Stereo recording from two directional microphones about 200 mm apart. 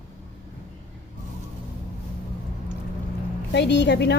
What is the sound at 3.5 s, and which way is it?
Speech, 60° left (ahead or behind).